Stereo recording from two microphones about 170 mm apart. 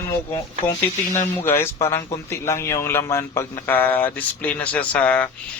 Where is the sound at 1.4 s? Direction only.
15° left (ahead or behind).